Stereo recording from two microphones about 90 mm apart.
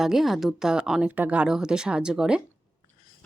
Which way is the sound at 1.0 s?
20° right (ahead or behind).